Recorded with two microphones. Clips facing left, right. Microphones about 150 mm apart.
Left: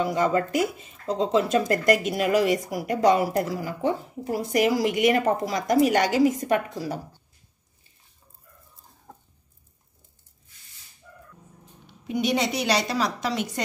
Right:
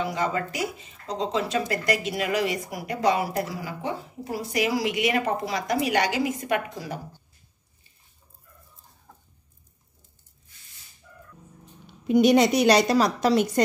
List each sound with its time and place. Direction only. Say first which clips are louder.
0.0 s speech: left 4 dB; 50° left (ahead or behind)
12.1 s a woman's voice: right 7 dB; 45° right (ahead or behind)